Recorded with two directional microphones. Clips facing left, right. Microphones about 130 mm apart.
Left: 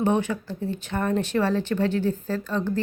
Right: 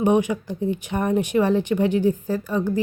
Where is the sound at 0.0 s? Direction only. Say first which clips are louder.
Right 4 dB; 15° right (ahead or behind).